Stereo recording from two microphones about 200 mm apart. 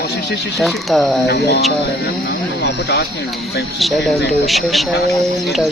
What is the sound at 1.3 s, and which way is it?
Speech, 55° left (ahead or behind).